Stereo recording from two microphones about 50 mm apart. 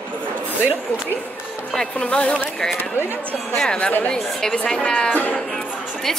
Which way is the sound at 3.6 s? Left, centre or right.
Left.